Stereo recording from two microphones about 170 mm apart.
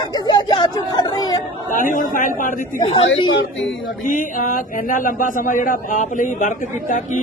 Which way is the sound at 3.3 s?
90° left.